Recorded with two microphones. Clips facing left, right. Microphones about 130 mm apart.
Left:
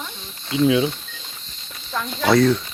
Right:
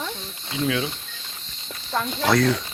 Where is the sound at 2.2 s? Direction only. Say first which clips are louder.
Left 4 dB; centre (ahead or behind).